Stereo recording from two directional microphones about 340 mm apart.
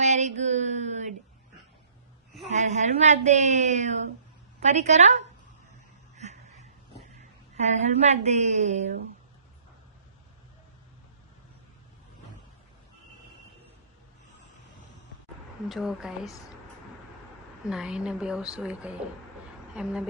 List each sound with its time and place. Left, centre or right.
0.0 s a sound: centre
2.5 s a woman's voice: centre
6.1 s a sound: centre
7.2 s a woman's voice: centre
15.7 s a woman's voice: centre
17.7 s a woman's voice: centre